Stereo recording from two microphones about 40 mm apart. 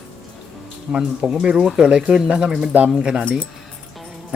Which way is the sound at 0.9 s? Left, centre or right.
Right.